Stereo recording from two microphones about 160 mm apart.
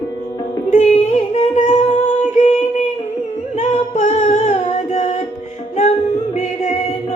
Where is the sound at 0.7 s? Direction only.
45° left (ahead or behind).